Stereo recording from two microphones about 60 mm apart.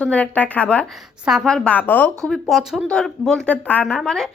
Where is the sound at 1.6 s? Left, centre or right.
Left.